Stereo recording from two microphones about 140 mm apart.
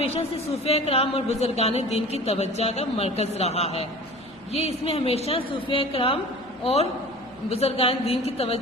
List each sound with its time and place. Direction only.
0.0 s a woman's voice: 45° left (ahead or behind)
7.5 s a woman's voice: 45° left (ahead or behind)